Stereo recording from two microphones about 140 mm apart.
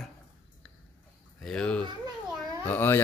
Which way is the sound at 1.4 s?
5° left (ahead or behind).